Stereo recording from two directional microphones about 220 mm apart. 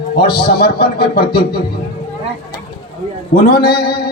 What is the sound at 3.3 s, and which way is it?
Speech, 45° left (ahead or behind).